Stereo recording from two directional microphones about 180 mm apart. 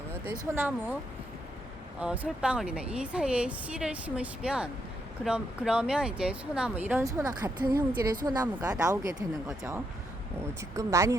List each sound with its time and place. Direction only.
0.1 s speech: 15° right (ahead or behind)
2.0 s a woman's voice: 5° right (ahead or behind)
10.6 s speech: 15° right (ahead or behind)